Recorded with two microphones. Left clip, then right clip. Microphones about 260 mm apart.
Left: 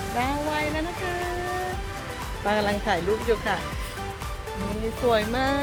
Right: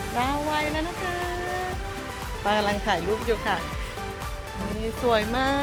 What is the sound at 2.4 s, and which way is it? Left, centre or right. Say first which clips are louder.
Speech: even; centre.